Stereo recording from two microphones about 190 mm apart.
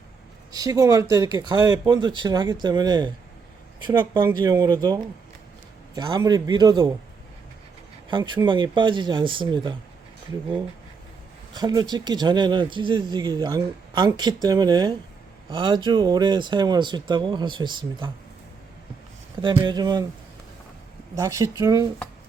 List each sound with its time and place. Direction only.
0.5 s speech: 20° right (ahead or behind)
8.1 s speech: 25° right (ahead or behind)
11.5 s speech: 20° right (ahead or behind)
19.4 s speech: 25° right (ahead or behind)
21.2 s speech: 15° right (ahead or behind)